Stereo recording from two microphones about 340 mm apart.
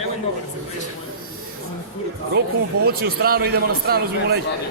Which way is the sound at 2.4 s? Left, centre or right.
Right.